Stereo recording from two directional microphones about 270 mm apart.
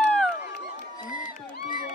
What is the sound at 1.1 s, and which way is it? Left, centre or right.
Crowd, left.